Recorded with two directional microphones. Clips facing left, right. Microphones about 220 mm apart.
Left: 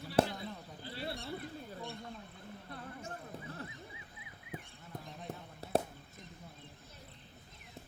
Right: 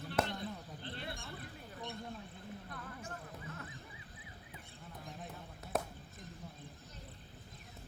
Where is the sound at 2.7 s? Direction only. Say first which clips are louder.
Left 2 dB; 30° left (ahead or behind).